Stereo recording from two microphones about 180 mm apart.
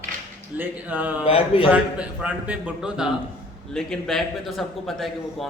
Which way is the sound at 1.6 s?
5° right (ahead or behind).